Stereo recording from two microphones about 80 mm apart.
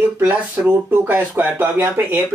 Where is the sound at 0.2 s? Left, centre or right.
Right.